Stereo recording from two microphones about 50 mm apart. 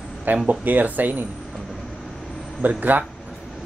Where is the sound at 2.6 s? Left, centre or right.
Right.